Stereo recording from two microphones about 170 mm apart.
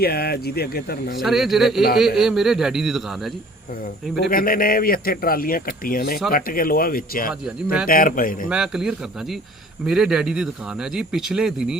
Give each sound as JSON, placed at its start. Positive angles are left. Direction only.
{"t": 0.0, "sound": "speech", "side_deg": 65}
{"t": 1.2, "sound": "speech", "side_deg": 0}
{"t": 4.3, "sound": "speech", "side_deg": 55}
{"t": 7.4, "sound": "speech", "side_deg": -5}
{"t": 7.9, "sound": "speech", "side_deg": 55}
{"t": 8.4, "sound": "speech", "side_deg": -5}